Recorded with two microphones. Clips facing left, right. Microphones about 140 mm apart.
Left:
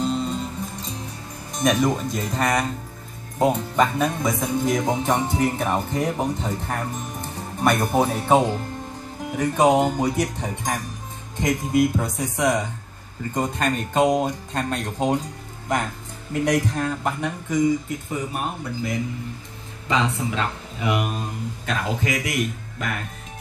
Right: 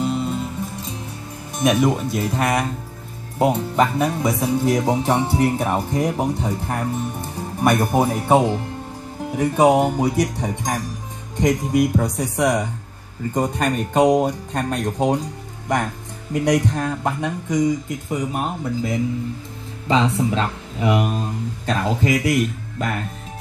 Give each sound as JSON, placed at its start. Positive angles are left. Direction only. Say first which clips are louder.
{"t": 0.0, "sound": "music", "louder": "right 2 dB", "side_deg": -10}
{"t": 1.6, "sound": "speech", "louder": "right 3 dB", "side_deg": -5}
{"t": 16.4, "sound": "speech", "louder": "right 3 dB", "side_deg": -15}